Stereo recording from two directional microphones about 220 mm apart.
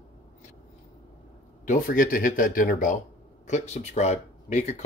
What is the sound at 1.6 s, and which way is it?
Speech, 40° left (ahead or behind).